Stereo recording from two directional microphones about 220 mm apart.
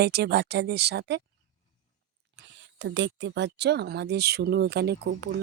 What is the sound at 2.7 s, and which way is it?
Speech, 55° right (ahead or behind).